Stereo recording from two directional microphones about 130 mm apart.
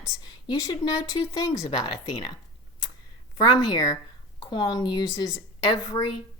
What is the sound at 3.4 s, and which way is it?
A woman's voice, 30° left (ahead or behind).